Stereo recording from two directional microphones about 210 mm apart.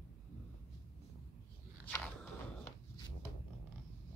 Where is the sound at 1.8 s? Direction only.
5° left (ahead or behind).